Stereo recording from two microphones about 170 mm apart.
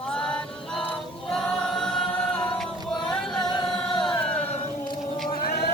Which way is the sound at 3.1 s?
Centre (ahead or behind).